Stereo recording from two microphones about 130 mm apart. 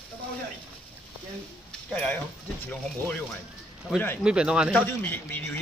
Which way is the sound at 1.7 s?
10° left (ahead or behind).